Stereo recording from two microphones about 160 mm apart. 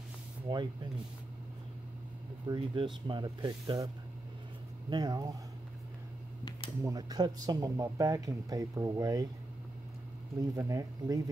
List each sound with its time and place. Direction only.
0.5 s speech: 30° right (ahead or behind)
2.4 s speech: 30° right (ahead or behind)
6.8 s speech: 20° right (ahead or behind)
10.5 s speech: 20° right (ahead or behind)